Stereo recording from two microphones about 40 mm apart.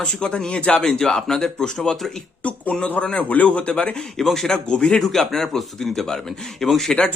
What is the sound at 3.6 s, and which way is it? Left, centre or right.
Speech, left.